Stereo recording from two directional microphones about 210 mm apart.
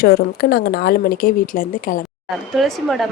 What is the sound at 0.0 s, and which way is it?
Speech, 45° left (ahead or behind).